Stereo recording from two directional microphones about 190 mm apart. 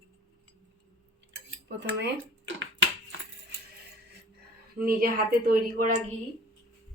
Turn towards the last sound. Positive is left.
turn(degrees=-45)  # may be behind; listen again after turning